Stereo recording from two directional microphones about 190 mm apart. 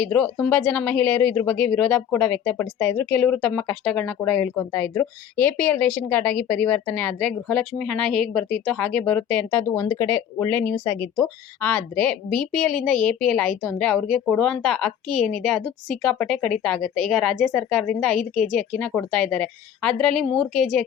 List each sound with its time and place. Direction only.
0.0 s speech: 10° left (ahead or behind)